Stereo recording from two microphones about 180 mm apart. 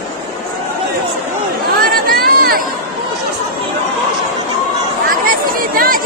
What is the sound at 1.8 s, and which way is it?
Chatter, 55° right (ahead or behind).